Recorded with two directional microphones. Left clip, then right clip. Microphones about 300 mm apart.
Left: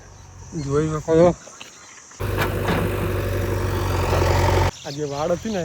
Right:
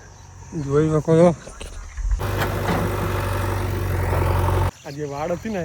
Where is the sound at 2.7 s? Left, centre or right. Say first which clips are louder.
Even; centre.